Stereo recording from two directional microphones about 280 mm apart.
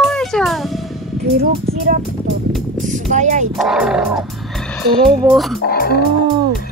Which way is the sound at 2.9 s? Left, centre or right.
Right.